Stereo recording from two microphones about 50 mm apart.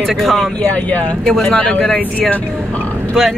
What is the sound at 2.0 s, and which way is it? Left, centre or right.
Speech, left.